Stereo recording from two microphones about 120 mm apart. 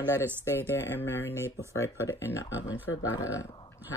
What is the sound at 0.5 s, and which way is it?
Speech, 20° left (ahead or behind).